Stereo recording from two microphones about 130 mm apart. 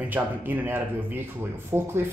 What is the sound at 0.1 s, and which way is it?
Speech, 15° right (ahead or behind).